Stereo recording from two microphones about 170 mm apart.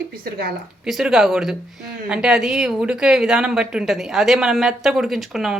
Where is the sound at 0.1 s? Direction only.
60° right (ahead or behind).